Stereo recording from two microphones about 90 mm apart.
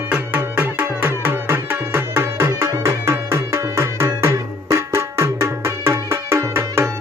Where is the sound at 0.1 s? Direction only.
20° right (ahead or behind).